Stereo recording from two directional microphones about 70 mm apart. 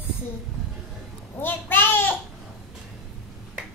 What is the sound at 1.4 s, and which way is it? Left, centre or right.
Babbling, left.